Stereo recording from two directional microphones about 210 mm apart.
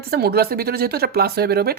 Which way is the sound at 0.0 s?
50° right (ahead or behind).